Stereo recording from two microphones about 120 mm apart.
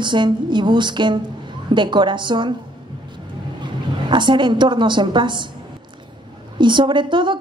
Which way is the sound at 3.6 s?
40° right (ahead or behind).